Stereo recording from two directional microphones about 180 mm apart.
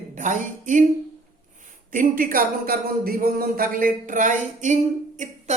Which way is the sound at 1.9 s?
50° right (ahead or behind).